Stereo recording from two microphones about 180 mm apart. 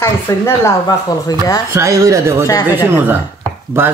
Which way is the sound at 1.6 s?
15° right (ahead or behind).